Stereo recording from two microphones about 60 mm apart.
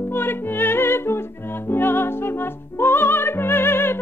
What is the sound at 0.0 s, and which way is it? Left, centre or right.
Music, left.